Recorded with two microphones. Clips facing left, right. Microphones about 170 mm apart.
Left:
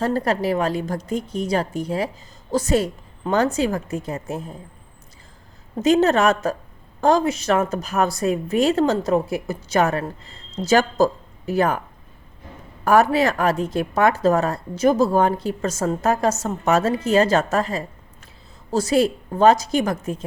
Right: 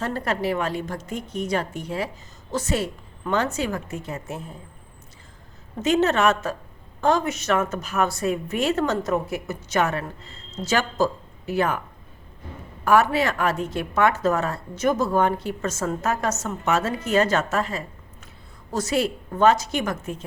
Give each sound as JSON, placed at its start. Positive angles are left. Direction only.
{"t": 0.0, "sound": "a woman's voice", "side_deg": 40}
{"t": 5.8, "sound": "a woman's voice", "side_deg": 35}
{"t": 12.8, "sound": "a woman's voice", "side_deg": 40}